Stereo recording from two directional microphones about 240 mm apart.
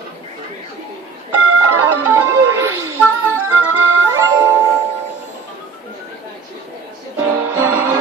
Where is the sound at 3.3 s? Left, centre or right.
Right.